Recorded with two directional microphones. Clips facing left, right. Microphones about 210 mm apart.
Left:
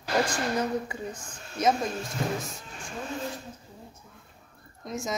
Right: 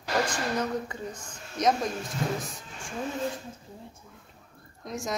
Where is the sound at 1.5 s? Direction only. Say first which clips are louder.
Even; 5° left (ahead or behind).